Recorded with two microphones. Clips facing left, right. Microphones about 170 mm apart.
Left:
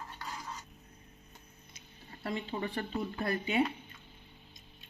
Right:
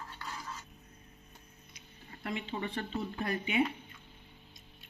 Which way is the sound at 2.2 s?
40° left (ahead or behind).